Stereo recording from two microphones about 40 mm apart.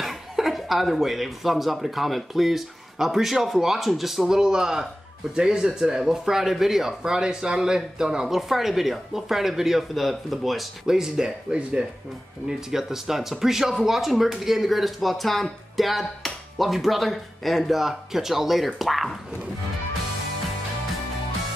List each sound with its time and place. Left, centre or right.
0.0 s speech: centre
4.4 s speech: centre
10.9 s speech: centre
12.4 s speech: centre